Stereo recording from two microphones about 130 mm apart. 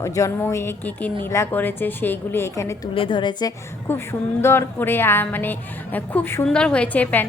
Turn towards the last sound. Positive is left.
turn(degrees=15)  # may be behind; listen again after turning